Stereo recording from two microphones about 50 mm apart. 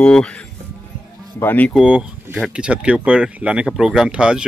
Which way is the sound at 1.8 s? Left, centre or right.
Centre.